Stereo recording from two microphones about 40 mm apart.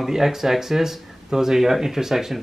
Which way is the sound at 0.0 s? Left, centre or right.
Centre.